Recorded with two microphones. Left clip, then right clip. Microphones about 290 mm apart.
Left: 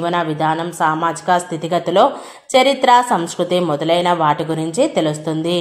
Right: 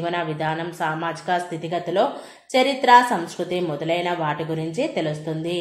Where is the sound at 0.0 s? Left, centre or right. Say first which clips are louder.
Left 7 dB; centre.